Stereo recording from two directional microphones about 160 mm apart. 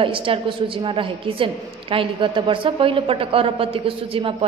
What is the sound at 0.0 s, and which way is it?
A woman's voice, 35° right (ahead or behind).